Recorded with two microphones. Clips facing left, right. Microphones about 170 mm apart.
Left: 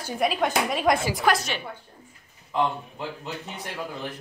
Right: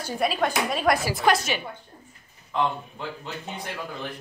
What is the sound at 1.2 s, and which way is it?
Speech, centre (ahead or behind).